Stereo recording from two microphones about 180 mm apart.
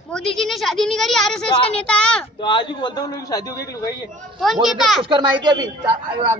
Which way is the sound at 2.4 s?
25° left (ahead or behind).